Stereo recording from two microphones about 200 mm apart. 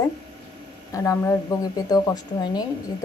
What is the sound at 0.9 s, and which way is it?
A woman's voice, 15° left (ahead or behind).